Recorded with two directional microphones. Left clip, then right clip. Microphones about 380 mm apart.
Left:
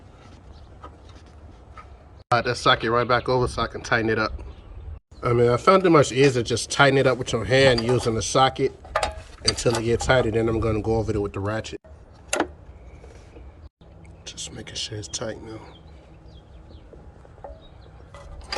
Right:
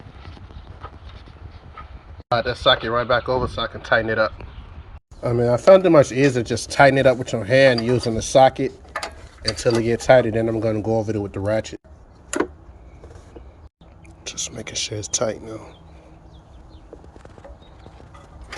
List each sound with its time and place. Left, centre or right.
2.3 s speech: centre
5.4 s speech: left
6.0 s speech: centre
14.3 s speech: centre